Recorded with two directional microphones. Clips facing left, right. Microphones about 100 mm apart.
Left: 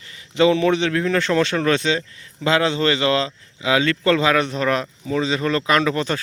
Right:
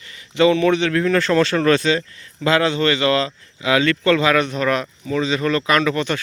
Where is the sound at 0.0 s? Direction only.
25° left (ahead or behind).